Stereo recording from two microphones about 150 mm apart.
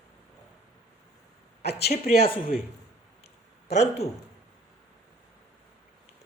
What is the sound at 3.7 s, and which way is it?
Speech, 45° left (ahead or behind).